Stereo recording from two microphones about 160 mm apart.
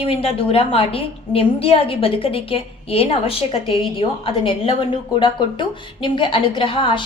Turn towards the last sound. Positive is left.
turn(degrees=30)  # may be behind; listen again after turning